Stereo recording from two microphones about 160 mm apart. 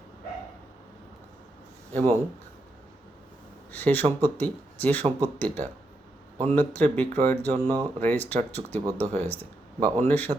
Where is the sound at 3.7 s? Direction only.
10° left (ahead or behind).